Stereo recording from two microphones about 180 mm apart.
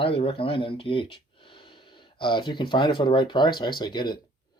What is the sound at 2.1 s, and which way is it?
Speech, 25° left (ahead or behind).